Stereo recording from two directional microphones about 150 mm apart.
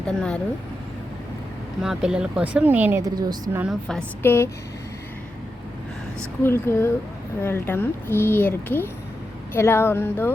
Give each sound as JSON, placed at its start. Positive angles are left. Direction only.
{"t": 0.1, "sound": "a woman's voice", "side_deg": 5}
{"t": 1.8, "sound": "speech", "side_deg": -5}
{"t": 3.0, "sound": "a woman's voice", "side_deg": -25}
{"t": 3.6, "sound": "a woman's voice", "side_deg": 0}
{"t": 4.2, "sound": "speech", "side_deg": 15}
{"t": 6.4, "sound": "speech", "side_deg": 15}